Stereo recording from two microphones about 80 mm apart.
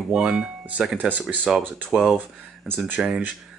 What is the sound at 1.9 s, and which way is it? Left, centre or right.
Speech, centre.